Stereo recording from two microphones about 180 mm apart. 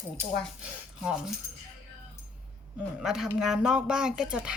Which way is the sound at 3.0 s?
Centre (ahead or behind).